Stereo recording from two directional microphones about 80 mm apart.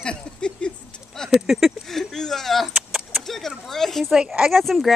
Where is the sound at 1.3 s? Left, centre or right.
Centre.